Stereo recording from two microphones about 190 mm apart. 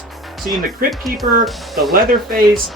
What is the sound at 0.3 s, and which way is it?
Music, centre (ahead or behind).